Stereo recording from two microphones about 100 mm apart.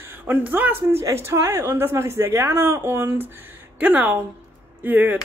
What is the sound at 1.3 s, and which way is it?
Speech, 25° right (ahead or behind).